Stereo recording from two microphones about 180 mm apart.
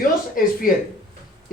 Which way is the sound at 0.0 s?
50° left (ahead or behind).